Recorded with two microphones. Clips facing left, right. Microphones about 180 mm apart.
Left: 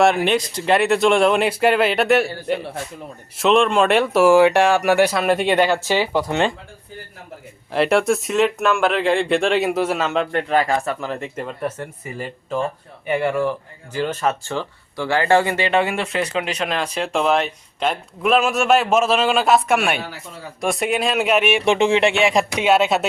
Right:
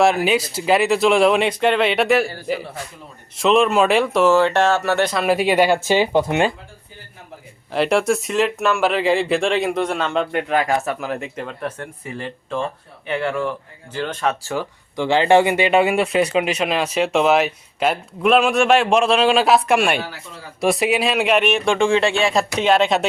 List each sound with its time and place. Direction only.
0.0 s speech: centre (ahead or behind)
5.2 s speech: 5° right (ahead or behind); by 6.4 s 20° right (ahead or behind)
7.7 s speech: centre (ahead or behind)
10.3 s speech: 5° right (ahead or behind)
14.5 s speech: 15° right (ahead or behind); by 21.6 s 5° left (ahead or behind)
21.6 s speech: 20° left (ahead or behind); by 23.0 s 5° left (ahead or behind)